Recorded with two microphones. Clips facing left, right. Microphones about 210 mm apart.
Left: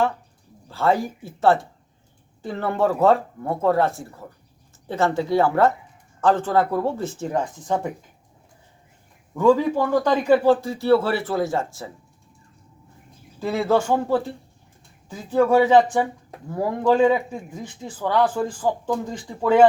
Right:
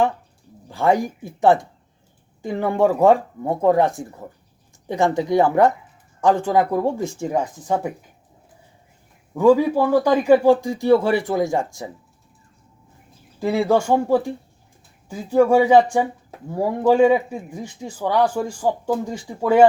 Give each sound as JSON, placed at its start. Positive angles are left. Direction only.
{"t": 0.7, "sound": "a man's voice", "side_deg": -15}
{"t": 9.3, "sound": "a man's voice", "side_deg": -10}
{"t": 13.4, "sound": "a man's voice", "side_deg": -15}